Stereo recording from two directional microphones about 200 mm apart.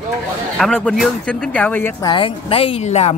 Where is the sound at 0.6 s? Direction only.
5° left (ahead or behind).